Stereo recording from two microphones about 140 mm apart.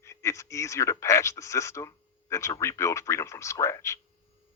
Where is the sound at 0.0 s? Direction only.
20° left (ahead or behind).